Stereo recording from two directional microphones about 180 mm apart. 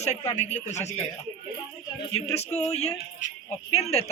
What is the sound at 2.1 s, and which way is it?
A man's voice, 35° left (ahead or behind).